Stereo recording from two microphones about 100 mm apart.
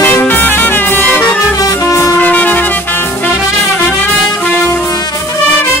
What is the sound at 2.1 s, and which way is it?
Music, 15° left (ahead or behind).